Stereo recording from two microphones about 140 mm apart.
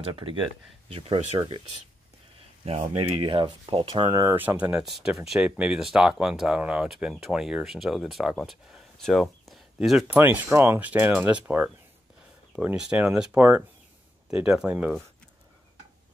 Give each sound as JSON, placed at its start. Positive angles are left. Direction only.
{"t": 0.0, "sound": "speech", "side_deg": -40}
{"t": 3.0, "sound": "speech", "side_deg": -40}
{"t": 4.4, "sound": "speech", "side_deg": -10}